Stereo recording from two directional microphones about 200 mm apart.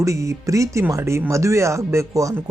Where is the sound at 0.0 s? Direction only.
15° right (ahead or behind).